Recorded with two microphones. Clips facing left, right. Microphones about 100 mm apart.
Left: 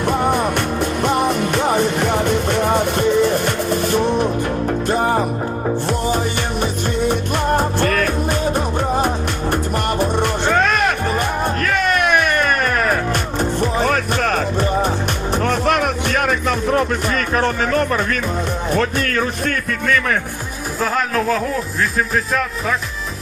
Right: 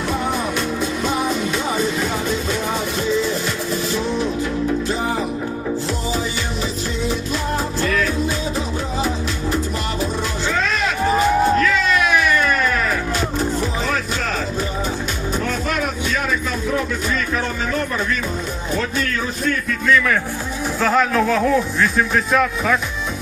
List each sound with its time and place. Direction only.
0.0 s music: 55° left (ahead or behind)
18.7 s speech: 55° left (ahead or behind)
20.8 s speech: centre (ahead or behind)